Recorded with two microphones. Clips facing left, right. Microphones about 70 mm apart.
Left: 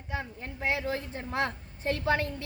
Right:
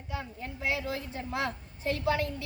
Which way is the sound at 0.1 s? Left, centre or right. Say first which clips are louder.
Left 2 dB; left.